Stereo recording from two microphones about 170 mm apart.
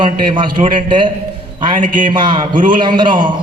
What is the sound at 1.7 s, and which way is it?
Speech, 50° right (ahead or behind).